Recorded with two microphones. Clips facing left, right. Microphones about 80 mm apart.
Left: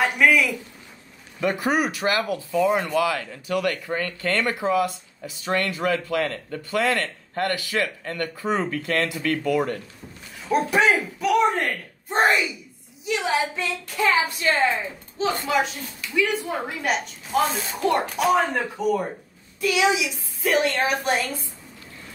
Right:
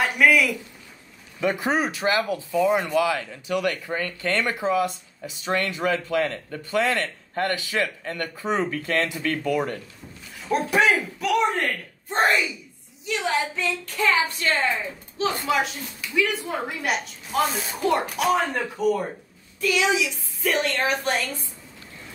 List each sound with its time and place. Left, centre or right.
0.0 s a sound: centre
1.4 s speech: right
10.4 s speech: centre
15.1 s speech: centre
19.6 s speech: centre